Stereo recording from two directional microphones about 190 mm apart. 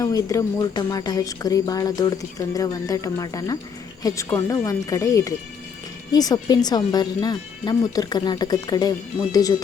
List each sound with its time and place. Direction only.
0.0 s speech: 20° left (ahead or behind)